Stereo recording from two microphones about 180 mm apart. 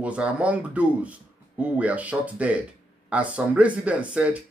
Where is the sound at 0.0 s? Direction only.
5° right (ahead or behind).